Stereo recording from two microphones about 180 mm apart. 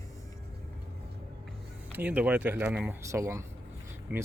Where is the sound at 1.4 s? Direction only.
5° right (ahead or behind).